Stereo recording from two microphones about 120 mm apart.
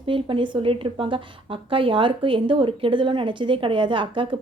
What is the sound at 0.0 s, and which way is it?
A woman's voice, 45° right (ahead or behind).